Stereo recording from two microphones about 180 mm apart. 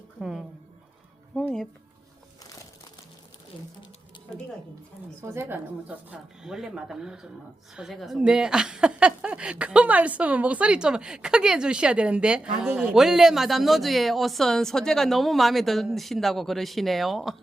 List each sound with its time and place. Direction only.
0.2 s a sound: 5° right (ahead or behind)
1.4 s music: 5° left (ahead or behind)
3.5 s sewing machine: 25° left (ahead or behind)
5.2 s a woman's voice: 15° right (ahead or behind)